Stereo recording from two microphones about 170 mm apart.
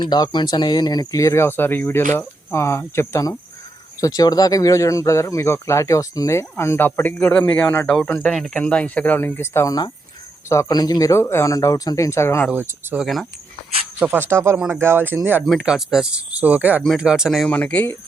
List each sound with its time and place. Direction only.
0.0 s speech: 25° left (ahead or behind)
12.5 s speech: 5° right (ahead or behind); by 17.9 s 10° left (ahead or behind)